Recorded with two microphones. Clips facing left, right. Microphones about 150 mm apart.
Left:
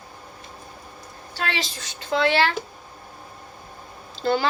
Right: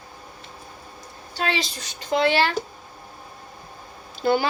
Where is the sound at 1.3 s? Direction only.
15° right (ahead or behind).